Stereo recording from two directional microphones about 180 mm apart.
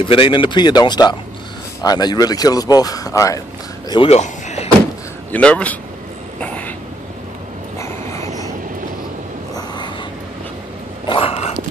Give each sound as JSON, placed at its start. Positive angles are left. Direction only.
{"t": 0.0, "sound": "speech", "side_deg": 30}
{"t": 3.9, "sound": "a sound", "side_deg": 35}
{"t": 5.3, "sound": "speech", "side_deg": 5}
{"t": 6.4, "sound": "vehicle", "side_deg": 10}
{"t": 7.8, "sound": "vehicle", "side_deg": 15}
{"t": 11.1, "sound": "a sound", "side_deg": 30}